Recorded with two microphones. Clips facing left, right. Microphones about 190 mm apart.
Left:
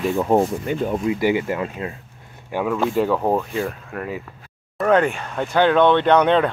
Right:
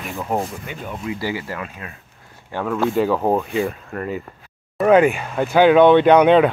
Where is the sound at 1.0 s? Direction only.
20° left (ahead or behind).